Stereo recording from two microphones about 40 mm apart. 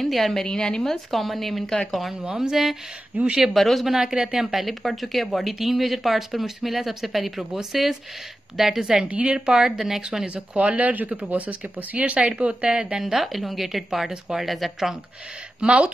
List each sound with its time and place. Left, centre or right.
0.0 s a woman's voice: centre
0.8 s speech: centre
2.3 s speech: centre
3.3 s speech: centre
3.5 s speech: centre
3.9 s speech: centre
4.5 s speech: centre
9.0 s speech: right
9.5 s speech: centre
10.2 s speech: right
12.2 s speech: right
13.0 s speech: centre
15.6 s speech: right